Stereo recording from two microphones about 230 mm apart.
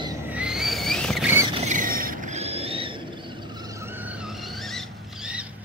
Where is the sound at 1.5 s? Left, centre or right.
Right.